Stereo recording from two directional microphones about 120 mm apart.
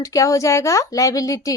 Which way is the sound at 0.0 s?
25° left (ahead or behind).